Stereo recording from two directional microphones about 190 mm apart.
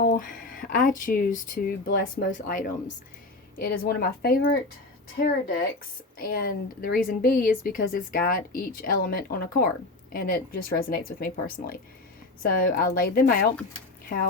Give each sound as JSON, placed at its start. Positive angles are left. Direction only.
{"t": 0.0, "sound": "speech", "side_deg": 50}